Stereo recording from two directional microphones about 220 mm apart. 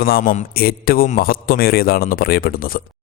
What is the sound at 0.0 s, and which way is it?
A man's voice, 40° left (ahead or behind).